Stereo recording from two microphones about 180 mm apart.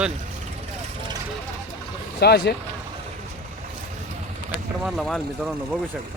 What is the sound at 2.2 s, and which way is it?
Speech, 65° left (ahead or behind).